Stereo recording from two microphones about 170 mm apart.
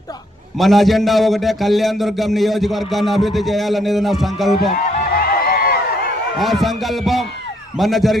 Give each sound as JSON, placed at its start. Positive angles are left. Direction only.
{"t": 0.6, "sound": "a man's voice", "side_deg": 0}
{"t": 4.7, "sound": "a sound", "side_deg": 55}
{"t": 6.4, "sound": "a man's voice", "side_deg": 0}